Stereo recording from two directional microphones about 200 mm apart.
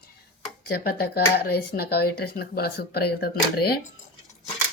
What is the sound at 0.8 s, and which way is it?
A woman's voice, 50° left (ahead or behind).